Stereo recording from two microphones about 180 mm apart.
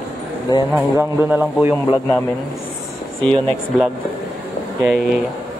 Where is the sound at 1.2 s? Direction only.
10° right (ahead or behind).